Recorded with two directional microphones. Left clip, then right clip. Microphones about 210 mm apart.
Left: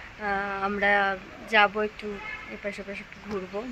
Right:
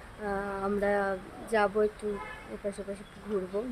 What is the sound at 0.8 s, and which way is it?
Speech, 10° right (ahead or behind).